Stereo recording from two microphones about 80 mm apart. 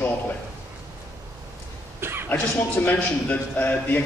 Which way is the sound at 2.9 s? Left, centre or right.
Centre.